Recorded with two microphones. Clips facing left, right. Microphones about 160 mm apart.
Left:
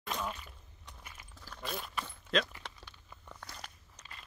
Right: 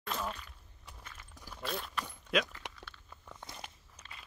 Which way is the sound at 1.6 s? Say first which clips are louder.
Right 1 dB; centre (ahead or behind).